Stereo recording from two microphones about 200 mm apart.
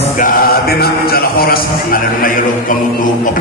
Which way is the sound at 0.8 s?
50° left (ahead or behind).